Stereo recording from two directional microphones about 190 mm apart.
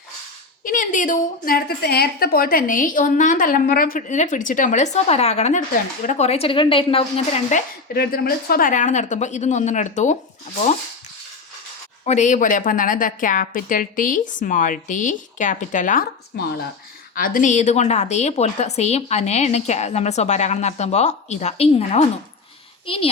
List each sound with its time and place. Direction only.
0.6 s a woman's voice: 45° left (ahead or behind); by 7.0 s 30° left (ahead or behind)
7.5 s a woman's voice: 55° left (ahead or behind)
12.0 s a woman's voice: 40° left (ahead or behind)